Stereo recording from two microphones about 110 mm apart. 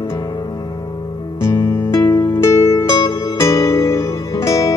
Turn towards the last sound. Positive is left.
turn(degrees=30)  # may be behind; listen again after turning